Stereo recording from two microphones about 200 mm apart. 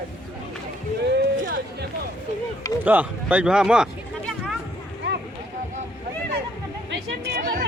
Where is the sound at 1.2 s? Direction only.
50° right (ahead or behind).